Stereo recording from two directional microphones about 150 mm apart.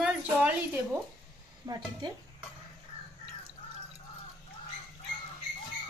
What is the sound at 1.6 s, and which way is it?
Speech, 30° right (ahead or behind).